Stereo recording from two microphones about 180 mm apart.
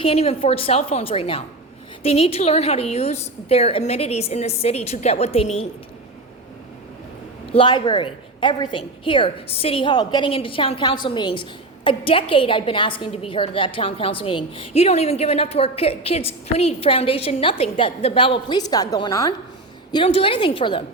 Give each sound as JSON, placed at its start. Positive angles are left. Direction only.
{"t": 0.0, "sound": "a woman's voice", "side_deg": 35}
{"t": 7.5, "sound": "a woman's voice", "side_deg": 25}